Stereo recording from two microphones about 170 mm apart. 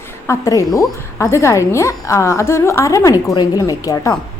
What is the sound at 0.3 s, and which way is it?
A woman's voice, 20° left (ahead or behind).